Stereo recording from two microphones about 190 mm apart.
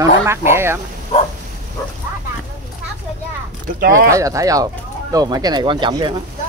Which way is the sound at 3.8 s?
50° right (ahead or behind).